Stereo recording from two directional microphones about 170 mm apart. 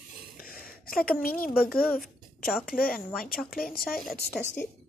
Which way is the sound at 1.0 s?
60° left (ahead or behind).